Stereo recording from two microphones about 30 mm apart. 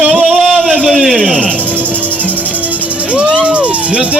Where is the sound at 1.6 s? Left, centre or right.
Right.